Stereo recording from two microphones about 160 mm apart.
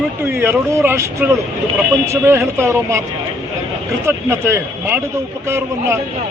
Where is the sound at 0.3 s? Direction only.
15° right (ahead or behind).